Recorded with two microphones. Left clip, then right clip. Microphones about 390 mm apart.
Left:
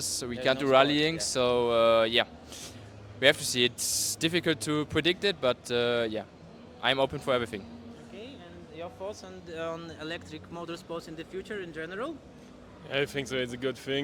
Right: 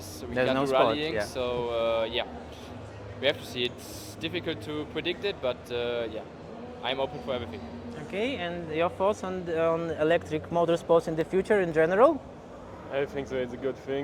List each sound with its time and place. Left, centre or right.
0.0 s a sound: left
0.4 s speech: left
6.8 s speech: left
8.1 s speech: right
9.6 s speech: centre; by 12.0 s right